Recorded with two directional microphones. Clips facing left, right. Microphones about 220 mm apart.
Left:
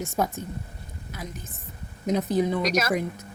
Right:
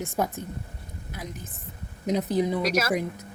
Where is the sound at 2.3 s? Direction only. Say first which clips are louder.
Left 1 dB; 10° right (ahead or behind).